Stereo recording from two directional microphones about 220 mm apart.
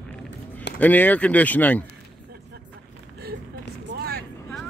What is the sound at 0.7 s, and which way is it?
Speech, 10° left (ahead or behind).